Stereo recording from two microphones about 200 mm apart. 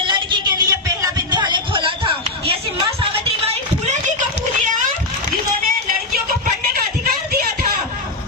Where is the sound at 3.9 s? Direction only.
35° right (ahead or behind).